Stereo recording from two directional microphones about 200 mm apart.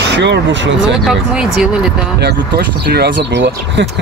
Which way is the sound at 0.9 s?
Centre (ahead or behind).